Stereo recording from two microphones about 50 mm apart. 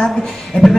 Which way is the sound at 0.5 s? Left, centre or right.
Left.